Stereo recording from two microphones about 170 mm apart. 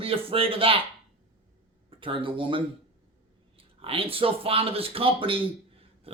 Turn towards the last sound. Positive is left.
turn(degrees=-30)  # may be behind; listen again after turning